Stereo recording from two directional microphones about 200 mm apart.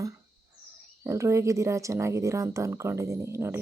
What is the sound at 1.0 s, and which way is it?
Speech, 15° right (ahead or behind).